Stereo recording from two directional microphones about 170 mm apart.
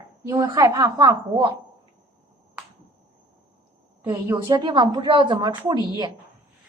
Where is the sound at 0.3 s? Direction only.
20° right (ahead or behind).